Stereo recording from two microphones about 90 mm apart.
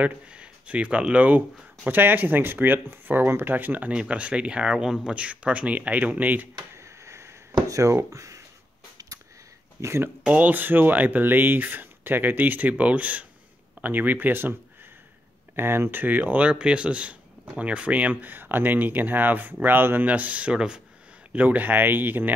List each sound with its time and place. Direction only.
0.0 s speech: 15° right (ahead or behind)
6.8 s a sound: 30° right (ahead or behind)
7.6 s speech: 35° right (ahead or behind)
9.8 s speech: 30° right (ahead or behind)
10.2 s speech: 15° right (ahead or behind)
15.5 s speech: 25° right (ahead or behind)